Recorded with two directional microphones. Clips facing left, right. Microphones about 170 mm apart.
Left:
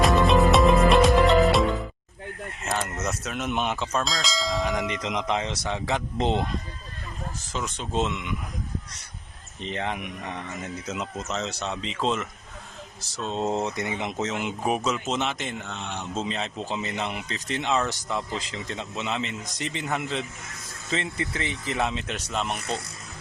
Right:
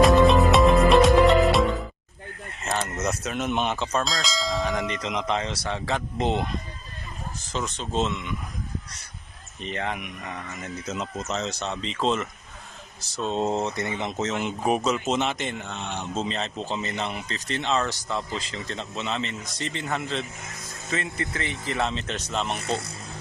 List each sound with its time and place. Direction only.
0.0 s music: centre (ahead or behind)
2.8 s speech: centre (ahead or behind)
5.0 s speech: 15° left (ahead or behind)
7.5 s speech: 10° left (ahead or behind)
9.6 s speech: 20° left (ahead or behind)
10.8 s speech: 5° left (ahead or behind)
22.6 s speech: 25° right (ahead or behind)